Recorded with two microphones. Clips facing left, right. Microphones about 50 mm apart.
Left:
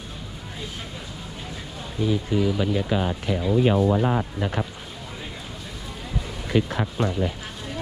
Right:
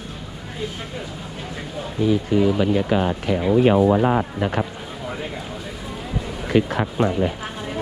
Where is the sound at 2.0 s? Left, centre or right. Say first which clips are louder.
Right 5 dB; right.